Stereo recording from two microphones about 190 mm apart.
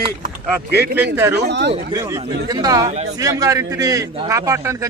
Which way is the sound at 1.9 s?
20° right (ahead or behind).